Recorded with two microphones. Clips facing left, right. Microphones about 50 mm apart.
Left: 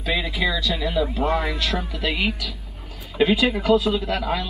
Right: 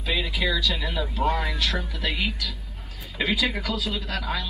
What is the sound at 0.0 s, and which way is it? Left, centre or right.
Speech, centre.